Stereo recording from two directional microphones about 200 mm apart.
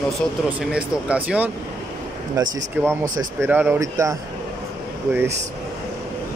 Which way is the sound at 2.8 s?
10° right (ahead or behind).